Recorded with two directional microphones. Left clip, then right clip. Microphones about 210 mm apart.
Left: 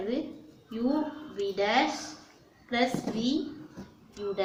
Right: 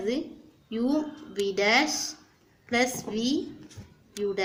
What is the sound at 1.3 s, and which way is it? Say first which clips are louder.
A woman's voice: right 4 dB; 40° right (ahead or behind).